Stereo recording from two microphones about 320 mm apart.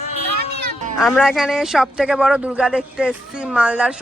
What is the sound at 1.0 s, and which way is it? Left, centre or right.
Speech, centre.